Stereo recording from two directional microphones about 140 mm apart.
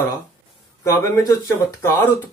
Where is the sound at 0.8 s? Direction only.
20° left (ahead or behind).